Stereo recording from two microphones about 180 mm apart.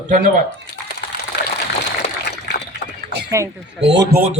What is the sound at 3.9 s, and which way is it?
Speech, 75° right (ahead or behind).